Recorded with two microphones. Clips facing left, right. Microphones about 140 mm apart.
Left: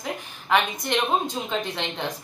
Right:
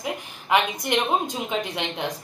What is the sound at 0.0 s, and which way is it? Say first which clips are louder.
A woman's voice: right 2 dB; 10° right (ahead or behind).